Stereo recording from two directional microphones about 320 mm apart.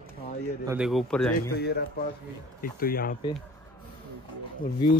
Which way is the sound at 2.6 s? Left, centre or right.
Left.